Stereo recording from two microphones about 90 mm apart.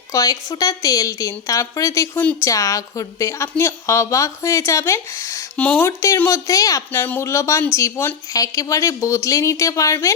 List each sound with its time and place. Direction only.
0.1 s a woman's voice: 40° left (ahead or behind)
5.5 s speech: 15° left (ahead or behind)
6.2 s a woman's voice: 40° left (ahead or behind)
6.9 s a woman's voice: 25° left (ahead or behind)